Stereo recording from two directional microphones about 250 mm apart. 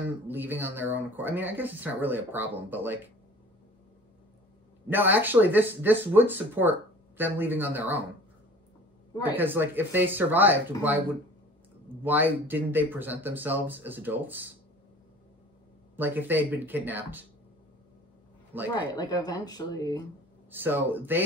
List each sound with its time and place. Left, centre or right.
0.3 s speech: centre
4.8 s speech: centre
9.3 s speech: centre
12.0 s speech: centre
16.0 s speech: centre
18.7 s speech: centre
20.5 s speech: centre